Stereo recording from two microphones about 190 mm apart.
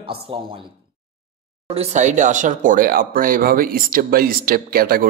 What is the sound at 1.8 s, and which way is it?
Speech, 40° right (ahead or behind).